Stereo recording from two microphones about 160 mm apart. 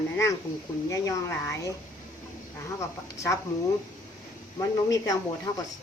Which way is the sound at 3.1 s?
15° left (ahead or behind).